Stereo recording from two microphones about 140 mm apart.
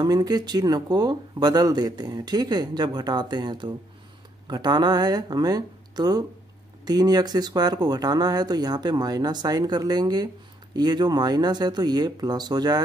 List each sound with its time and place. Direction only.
0.0 s speech: 30° right (ahead or behind)